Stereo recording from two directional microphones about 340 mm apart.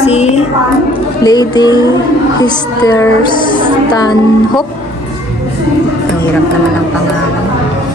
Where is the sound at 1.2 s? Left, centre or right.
Centre.